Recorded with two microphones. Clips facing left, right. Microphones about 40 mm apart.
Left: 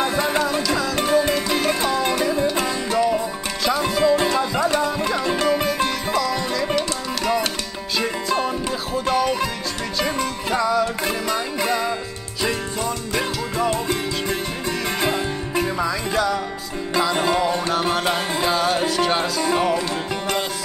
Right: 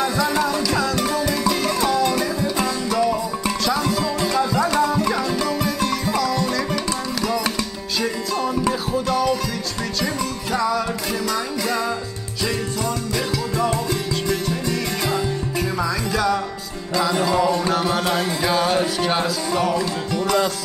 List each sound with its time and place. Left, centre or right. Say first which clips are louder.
0.0 s music: even; left
0.6 s music: right 1 dB; centre
0.9 s music: left 3 dB; left
6.3 s music: even; centre
9.0 s music: left 1 dB; left
10.6 s music: left 2 dB; centre
11.2 s music: even; left
13.1 s music: even; left
17.6 s music: even; centre
18.5 s music: right 1 dB; centre
19.5 s music: left 1 dB; left